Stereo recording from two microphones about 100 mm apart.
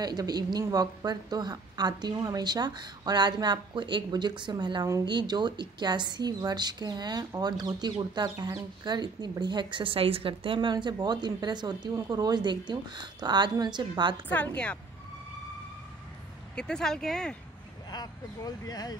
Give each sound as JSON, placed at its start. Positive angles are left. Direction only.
{"t": 0.0, "sound": "a woman's voice", "side_deg": -40}
{"t": 14.3, "sound": "speech", "side_deg": 15}
{"t": 16.5, "sound": "speech", "side_deg": 5}
{"t": 17.8, "sound": "speech", "side_deg": 40}